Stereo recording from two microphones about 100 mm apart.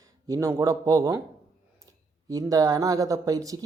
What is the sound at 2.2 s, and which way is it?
Speech, 35° right (ahead or behind).